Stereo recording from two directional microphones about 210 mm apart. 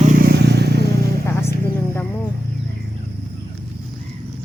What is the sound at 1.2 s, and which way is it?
Vehicle, 15° left (ahead or behind).